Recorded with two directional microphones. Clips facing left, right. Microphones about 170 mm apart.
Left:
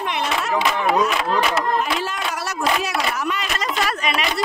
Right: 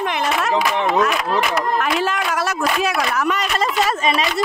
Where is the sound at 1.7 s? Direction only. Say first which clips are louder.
Right 3 dB; 90° right.